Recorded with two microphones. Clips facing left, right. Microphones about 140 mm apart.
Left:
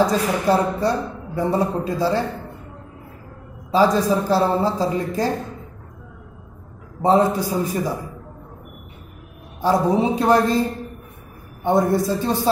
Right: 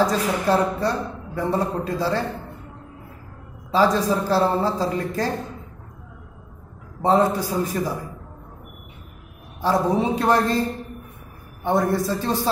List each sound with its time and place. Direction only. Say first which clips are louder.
0.0 s a woman's voice: left 2 dB; 15° left (ahead or behind)
3.7 s a woman's voice: left 2 dB; 15° left (ahead or behind)
7.0 s a woman's voice: left 2 dB; 15° left (ahead or behind)
9.6 s a woman's voice: left 2 dB; 10° left (ahead or behind)
11.8 s a woman's voice: left 3 dB; 15° left (ahead or behind)